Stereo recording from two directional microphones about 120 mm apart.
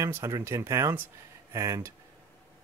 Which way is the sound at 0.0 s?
25° right (ahead or behind).